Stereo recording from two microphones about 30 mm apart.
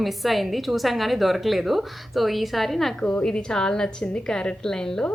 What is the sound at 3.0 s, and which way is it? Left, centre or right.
A woman's voice, left.